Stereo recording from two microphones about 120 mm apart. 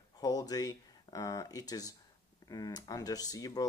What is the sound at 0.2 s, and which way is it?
Speech, 30° left (ahead or behind).